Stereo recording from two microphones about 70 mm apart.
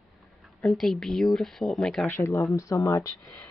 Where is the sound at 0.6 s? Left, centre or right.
Centre.